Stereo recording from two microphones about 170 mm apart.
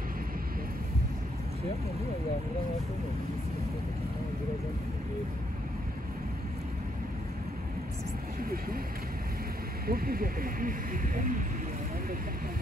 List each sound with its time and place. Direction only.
8.4 s speech: 60° right (ahead or behind)
9.8 s speech: 60° right (ahead or behind)